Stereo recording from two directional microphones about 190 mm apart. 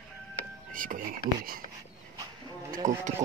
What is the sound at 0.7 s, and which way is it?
Speech, 45° right (ahead or behind).